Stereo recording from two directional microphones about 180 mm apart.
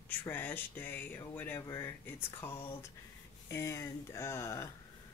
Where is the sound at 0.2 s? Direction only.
10° left (ahead or behind).